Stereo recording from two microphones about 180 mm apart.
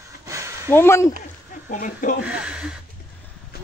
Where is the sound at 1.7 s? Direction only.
45° left (ahead or behind).